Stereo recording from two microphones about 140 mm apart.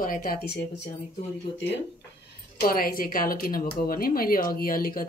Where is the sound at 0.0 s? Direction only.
85° left.